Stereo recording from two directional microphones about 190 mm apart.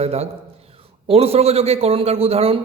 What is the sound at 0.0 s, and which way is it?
A man's voice, 35° right (ahead or behind).